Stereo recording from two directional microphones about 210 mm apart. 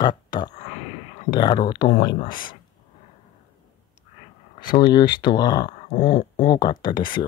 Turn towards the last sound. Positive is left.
turn(degrees=20)  # may be behind; listen again after turning